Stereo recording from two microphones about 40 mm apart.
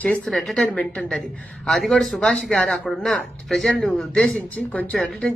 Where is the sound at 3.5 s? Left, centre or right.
Centre.